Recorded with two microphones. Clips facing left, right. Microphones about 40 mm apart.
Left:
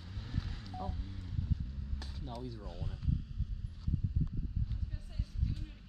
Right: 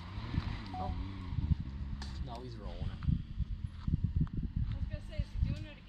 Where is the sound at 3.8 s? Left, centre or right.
Right.